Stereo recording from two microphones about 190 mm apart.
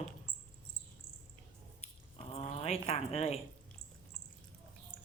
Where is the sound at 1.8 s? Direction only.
30° left (ahead or behind).